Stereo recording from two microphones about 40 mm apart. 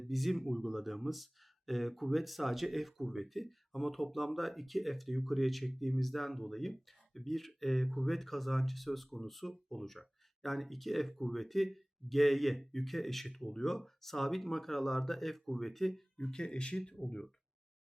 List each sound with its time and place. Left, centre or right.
0.0 s speech: centre
16.1 s speech: centre